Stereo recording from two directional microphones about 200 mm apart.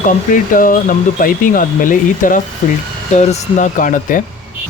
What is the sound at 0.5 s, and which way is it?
Speech, 45° left (ahead or behind).